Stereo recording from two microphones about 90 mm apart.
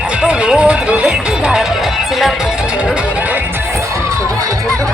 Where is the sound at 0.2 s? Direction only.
10° right (ahead or behind).